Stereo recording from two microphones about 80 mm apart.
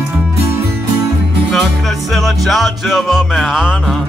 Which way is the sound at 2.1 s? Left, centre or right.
Centre.